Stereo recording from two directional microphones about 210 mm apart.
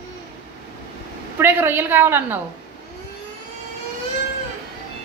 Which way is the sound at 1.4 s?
10° right (ahead or behind).